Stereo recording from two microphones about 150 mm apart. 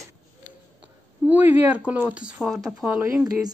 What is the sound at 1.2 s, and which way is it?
Speech, 10° right (ahead or behind).